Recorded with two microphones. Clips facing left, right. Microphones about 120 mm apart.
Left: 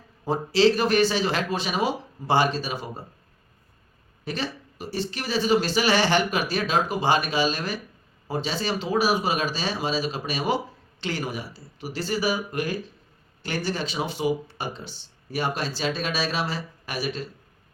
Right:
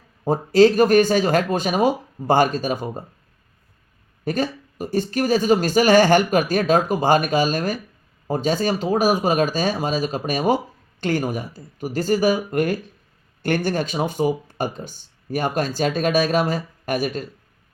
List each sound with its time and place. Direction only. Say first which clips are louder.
0.3 s speech: right 6 dB; 45° right (ahead or behind)
4.3 s speech: right 7 dB; 45° right (ahead or behind)